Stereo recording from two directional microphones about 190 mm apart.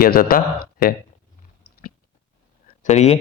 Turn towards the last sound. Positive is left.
turn(degrees=35)  # may be behind; listen again after turning